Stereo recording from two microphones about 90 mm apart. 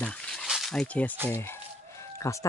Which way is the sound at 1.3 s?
30° left (ahead or behind).